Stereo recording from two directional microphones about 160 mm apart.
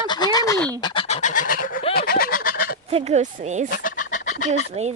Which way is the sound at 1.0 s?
45° left (ahead or behind).